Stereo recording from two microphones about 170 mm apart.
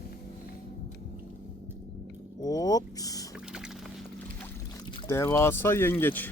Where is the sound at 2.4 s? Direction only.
20° left (ahead or behind).